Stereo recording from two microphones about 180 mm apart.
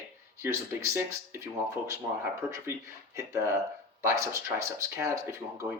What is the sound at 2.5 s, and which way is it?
Speech, 15° right (ahead or behind).